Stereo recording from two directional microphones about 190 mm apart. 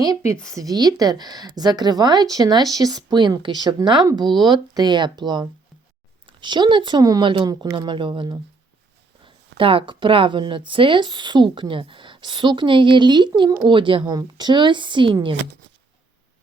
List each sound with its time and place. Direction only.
0.4 s a woman's voice: 20° right (ahead or behind)
4.2 s speech: centre (ahead or behind)
4.4 s a woman's voice: 20° right (ahead or behind)
9.6 s a woman's voice: 30° right (ahead or behind)